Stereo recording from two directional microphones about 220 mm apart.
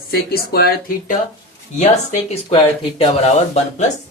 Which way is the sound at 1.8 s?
30° left (ahead or behind).